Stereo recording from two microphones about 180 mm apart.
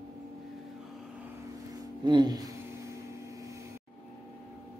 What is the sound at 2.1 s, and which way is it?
Music, 25° right (ahead or behind).